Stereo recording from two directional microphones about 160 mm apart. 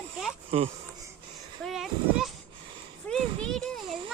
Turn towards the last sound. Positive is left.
turn(degrees=5)  # may be behind; listen again after turning